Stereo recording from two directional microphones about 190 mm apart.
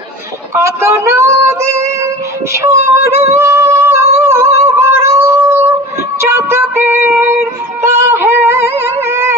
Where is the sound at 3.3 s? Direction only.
15° right (ahead or behind).